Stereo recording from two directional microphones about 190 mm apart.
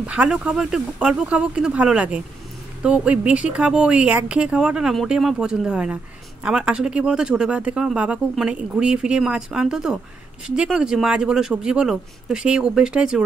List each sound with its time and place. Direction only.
0.0 s speech: 5° right (ahead or behind)